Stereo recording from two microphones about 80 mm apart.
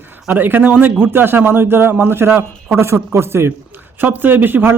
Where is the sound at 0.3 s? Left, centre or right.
Right.